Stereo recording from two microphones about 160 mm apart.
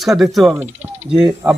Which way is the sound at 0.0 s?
Centre (ahead or behind).